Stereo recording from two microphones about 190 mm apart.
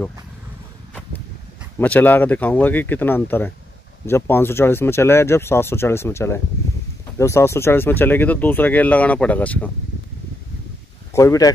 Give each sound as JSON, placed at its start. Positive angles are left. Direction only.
{"t": 1.8, "sound": "speech", "side_deg": 10}
{"t": 11.1, "sound": "speech", "side_deg": 15}